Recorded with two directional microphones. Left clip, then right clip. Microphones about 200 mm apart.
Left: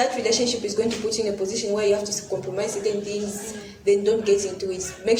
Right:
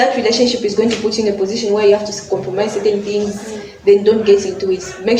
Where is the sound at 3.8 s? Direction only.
35° left (ahead or behind).